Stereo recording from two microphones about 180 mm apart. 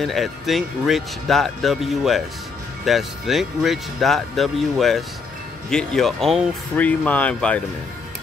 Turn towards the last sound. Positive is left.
turn(degrees=5)  # may be behind; listen again after turning